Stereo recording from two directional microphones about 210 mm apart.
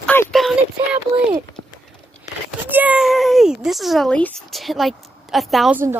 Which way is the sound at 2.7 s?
5° right (ahead or behind).